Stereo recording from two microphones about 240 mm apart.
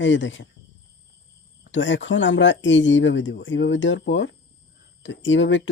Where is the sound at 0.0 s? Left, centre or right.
Left.